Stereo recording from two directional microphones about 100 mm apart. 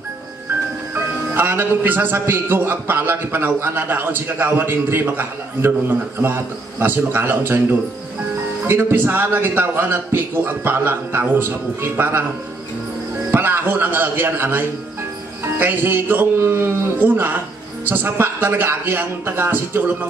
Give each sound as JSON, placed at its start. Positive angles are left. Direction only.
{"t": 0.9, "sound": "a man's voice", "side_deg": -20}
{"t": 13.3, "sound": "a man's voice", "side_deg": -20}